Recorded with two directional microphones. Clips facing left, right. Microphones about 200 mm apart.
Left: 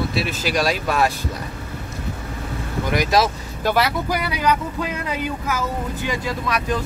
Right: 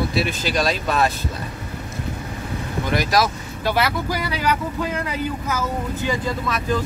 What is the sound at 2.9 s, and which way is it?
Speech, 20° left (ahead or behind).